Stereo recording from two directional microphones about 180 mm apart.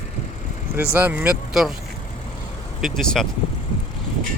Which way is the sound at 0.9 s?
10° right (ahead or behind).